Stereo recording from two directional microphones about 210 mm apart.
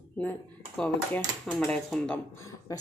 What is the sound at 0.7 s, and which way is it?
Speech, 5° left (ahead or behind).